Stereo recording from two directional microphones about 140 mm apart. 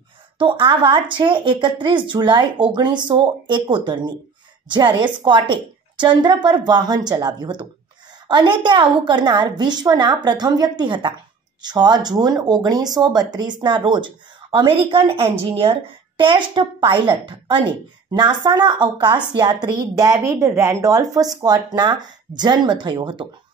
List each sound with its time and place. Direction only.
0.4 s a woman's voice: 35° right (ahead or behind)